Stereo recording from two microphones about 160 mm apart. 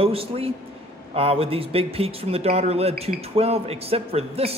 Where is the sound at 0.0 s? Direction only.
35° right (ahead or behind).